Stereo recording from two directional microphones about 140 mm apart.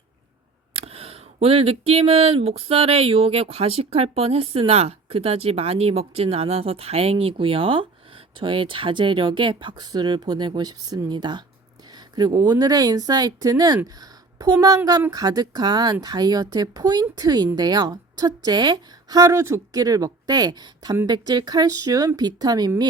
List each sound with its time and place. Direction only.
0.7 s speech: 40° right (ahead or behind)